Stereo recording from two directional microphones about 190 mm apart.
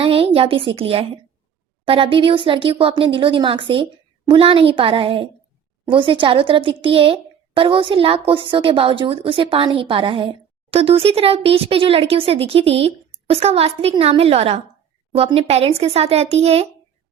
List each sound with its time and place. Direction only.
0.0 s a woman's voice: 30° right (ahead or behind)